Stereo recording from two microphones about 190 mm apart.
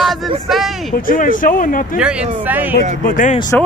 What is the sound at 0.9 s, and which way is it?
Speech, 45° left (ahead or behind).